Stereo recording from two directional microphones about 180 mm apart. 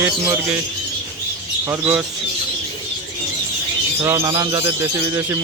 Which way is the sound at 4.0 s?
15° right (ahead or behind).